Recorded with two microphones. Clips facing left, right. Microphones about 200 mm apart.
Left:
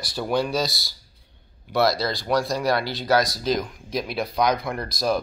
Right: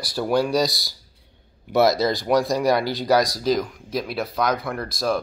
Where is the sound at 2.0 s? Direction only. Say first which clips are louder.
Right 4 dB; 20° right (ahead or behind).